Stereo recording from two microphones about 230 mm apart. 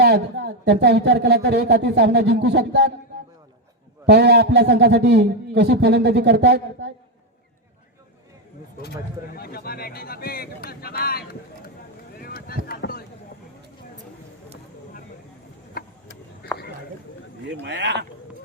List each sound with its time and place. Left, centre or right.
0.0 s a man's voice: right
4.0 s a man's voice: right
9.3 s speech: left
12.2 s a sound: left
15.7 s a sound: left
17.6 s a man's voice: right